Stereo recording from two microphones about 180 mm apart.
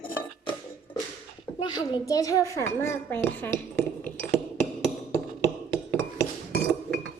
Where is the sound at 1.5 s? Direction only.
25° left (ahead or behind).